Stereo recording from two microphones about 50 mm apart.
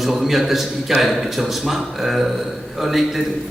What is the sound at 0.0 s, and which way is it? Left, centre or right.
A man's voice, centre.